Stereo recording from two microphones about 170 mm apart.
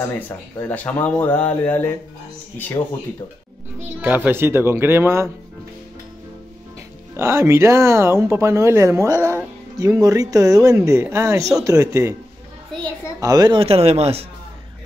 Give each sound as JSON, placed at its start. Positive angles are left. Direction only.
{"t": 0.6, "sound": "speech", "side_deg": 10}
{"t": 4.0, "sound": "speech", "side_deg": -10}
{"t": 7.2, "sound": "speech", "side_deg": -15}
{"t": 13.2, "sound": "speech", "side_deg": -20}